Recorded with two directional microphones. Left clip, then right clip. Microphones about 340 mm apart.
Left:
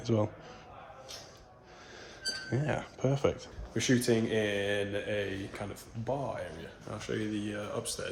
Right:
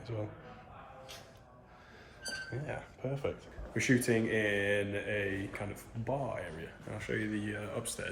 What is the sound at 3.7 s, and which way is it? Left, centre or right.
Speech, centre.